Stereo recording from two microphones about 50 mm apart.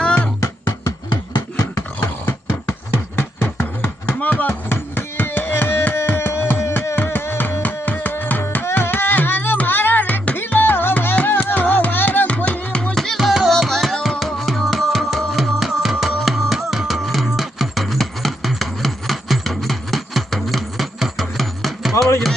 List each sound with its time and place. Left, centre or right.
0.0 s music: left
0.4 s music: left
2.0 s a sound: left
4.2 s chopping: left
4.7 s a sound: left
6.9 s music: left
12.9 s music: centre
13.2 s music: centre
13.5 s music: centre